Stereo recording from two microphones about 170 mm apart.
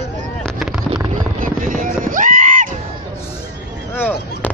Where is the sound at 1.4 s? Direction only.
50° right (ahead or behind).